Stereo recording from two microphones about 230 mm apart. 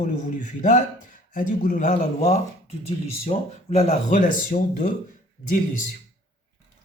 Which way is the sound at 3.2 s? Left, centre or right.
Left.